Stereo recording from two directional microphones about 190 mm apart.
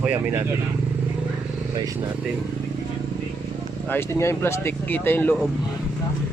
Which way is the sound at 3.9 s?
15° left (ahead or behind).